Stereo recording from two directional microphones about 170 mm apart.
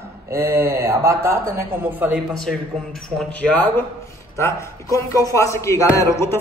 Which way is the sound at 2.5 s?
5° left (ahead or behind).